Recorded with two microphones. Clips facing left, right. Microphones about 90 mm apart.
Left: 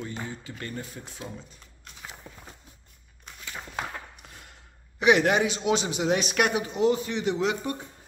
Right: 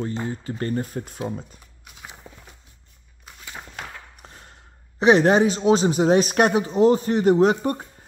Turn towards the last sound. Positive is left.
turn(degrees=-45)  # may be behind; listen again after turning